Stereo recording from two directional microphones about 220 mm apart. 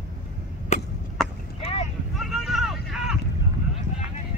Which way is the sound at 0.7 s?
30° left (ahead or behind).